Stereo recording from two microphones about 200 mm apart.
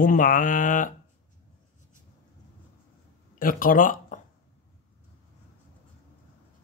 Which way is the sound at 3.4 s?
45° left (ahead or behind).